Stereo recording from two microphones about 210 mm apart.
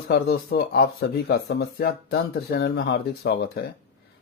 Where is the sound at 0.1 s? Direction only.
50° left (ahead or behind).